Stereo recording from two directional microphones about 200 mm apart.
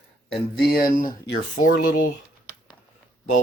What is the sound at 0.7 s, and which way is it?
Speech, 45° left (ahead or behind).